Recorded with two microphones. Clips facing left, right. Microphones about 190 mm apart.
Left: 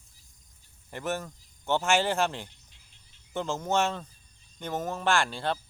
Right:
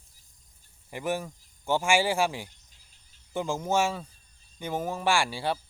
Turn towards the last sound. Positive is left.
turn(degrees=-10)  # may be behind; listen again after turning